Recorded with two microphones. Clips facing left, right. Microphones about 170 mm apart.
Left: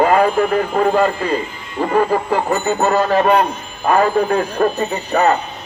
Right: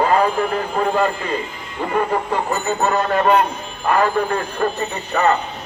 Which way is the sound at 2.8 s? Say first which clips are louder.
Left 3 dB; 35° left (ahead or behind).